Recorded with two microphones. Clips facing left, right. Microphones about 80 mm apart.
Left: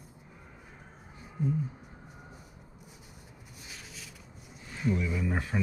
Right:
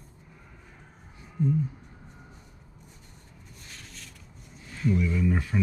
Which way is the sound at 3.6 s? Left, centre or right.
Centre.